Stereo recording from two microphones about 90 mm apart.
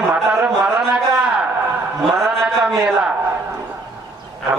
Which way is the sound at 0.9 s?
10° right (ahead or behind).